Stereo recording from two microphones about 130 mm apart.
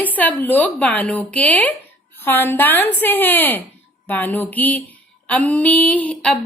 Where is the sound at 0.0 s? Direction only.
10° left (ahead or behind).